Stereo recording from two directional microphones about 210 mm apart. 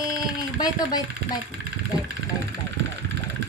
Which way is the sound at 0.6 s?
20° left (ahead or behind).